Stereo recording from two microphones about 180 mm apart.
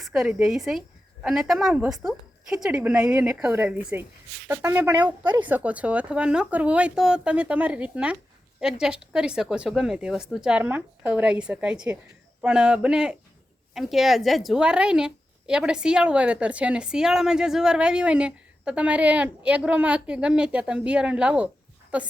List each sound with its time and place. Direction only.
0.0 s a woman's voice: 5° right (ahead or behind)
5.2 s speech: 25° right (ahead or behind)
5.5 s a woman's voice: 10° right (ahead or behind)